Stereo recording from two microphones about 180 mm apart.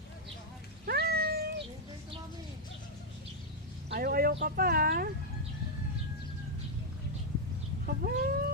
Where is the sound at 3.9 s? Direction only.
55° right (ahead or behind).